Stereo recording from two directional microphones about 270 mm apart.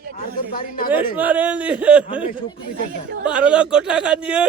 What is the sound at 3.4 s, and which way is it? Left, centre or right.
Speech, centre.